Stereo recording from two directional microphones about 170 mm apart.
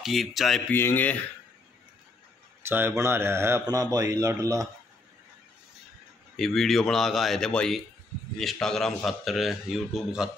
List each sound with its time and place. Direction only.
0.0 s a man's voice: centre (ahead or behind)
0.7 s speech: 10° left (ahead or behind)
2.6 s speech: 15° right (ahead or behind)
6.3 s a man's voice: centre (ahead or behind)